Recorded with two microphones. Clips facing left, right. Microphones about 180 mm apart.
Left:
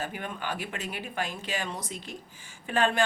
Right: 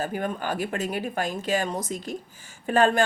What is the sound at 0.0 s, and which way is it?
Speech, 40° right (ahead or behind).